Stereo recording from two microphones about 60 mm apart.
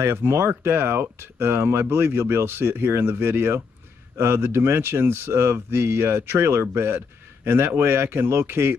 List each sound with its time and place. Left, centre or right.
0.2 s speech: right